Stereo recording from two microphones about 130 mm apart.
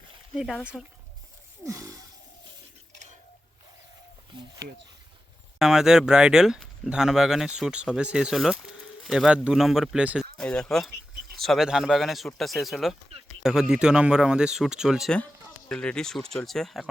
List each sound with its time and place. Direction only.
1.6 s gasp: 25° right (ahead or behind)
5.5 s speech: 5° right (ahead or behind)
10.3 s speech: 5° left (ahead or behind)
15.7 s speech: 5° left (ahead or behind)